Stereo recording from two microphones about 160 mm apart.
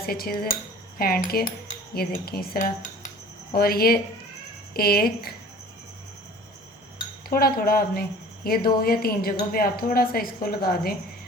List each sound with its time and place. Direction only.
0.0 s a woman's voice: 70° left (ahead or behind)
2.6 s cutlery: 50° left (ahead or behind)
3.5 s a woman's voice: 70° left (ahead or behind)
7.3 s a woman's voice: 70° left (ahead or behind)